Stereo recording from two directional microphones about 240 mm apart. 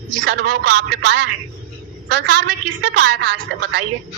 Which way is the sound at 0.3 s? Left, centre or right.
Right.